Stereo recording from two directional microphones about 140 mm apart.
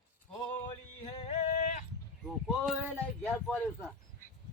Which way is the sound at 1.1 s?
45° left (ahead or behind).